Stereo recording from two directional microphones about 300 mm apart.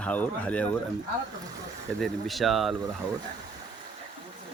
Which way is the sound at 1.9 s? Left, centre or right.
Centre.